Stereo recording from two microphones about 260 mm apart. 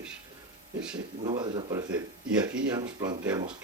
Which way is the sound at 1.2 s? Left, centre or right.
Centre.